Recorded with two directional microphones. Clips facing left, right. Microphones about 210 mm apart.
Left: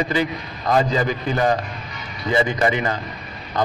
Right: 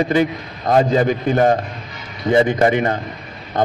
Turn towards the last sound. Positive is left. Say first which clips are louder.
# right 3 dB
turn(degrees=-50)  # may be behind; listen again after turning